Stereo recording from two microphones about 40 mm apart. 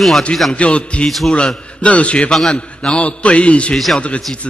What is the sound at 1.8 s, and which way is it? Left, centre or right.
A man's voice, left.